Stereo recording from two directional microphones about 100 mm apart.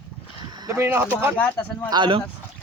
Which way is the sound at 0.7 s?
25° right (ahead or behind).